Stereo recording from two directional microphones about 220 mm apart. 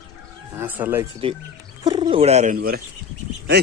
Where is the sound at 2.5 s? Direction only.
40° right (ahead or behind).